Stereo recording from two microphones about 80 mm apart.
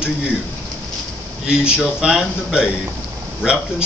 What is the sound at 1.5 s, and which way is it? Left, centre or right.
A man's voice, centre.